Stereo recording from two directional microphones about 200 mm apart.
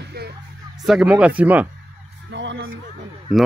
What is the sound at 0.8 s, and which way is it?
Speech, 5° right (ahead or behind).